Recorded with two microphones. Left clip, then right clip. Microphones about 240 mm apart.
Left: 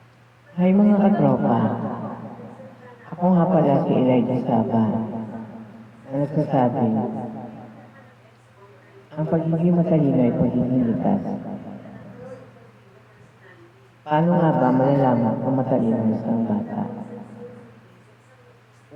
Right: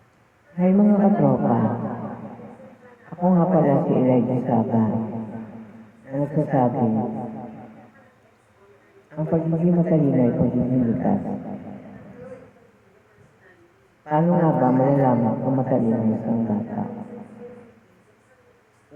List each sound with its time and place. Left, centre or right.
0.5 s a man's voice: right
9.1 s a man's voice: right
14.1 s a man's voice: right